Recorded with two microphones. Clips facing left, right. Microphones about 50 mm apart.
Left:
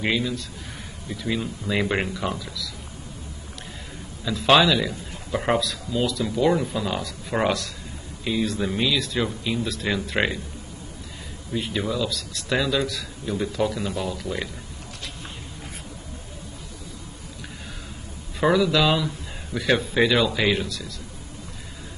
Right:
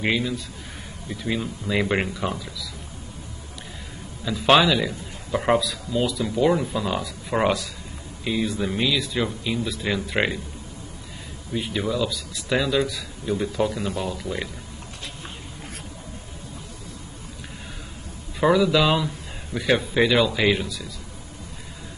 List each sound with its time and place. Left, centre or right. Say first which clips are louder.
0.0 s a man's voice: right 1 dB; centre
2.3 s speech: left 1 dB; centre
4.2 s a man's voice: even; centre
11.5 s speech: right 1 dB; centre
12.1 s a man's voice: even; centre
12.4 s speech: right 1 dB; centre
12.7 s a man's voice: right 2 dB; centre
13.2 s a man's voice: right 1 dB; centre
18.4 s a man's voice: right 1 dB; centre